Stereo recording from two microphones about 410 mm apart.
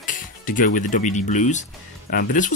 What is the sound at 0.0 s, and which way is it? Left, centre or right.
Speech, centre.